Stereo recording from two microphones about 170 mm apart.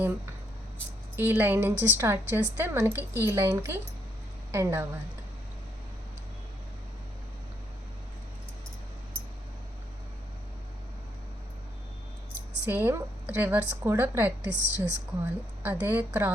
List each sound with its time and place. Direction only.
1.1 s a woman's voice: 10° right (ahead or behind)
12.6 s a woman's voice: 10° right (ahead or behind)